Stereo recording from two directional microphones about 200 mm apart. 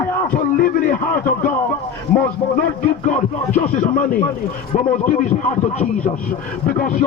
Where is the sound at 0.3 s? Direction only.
40° left (ahead or behind).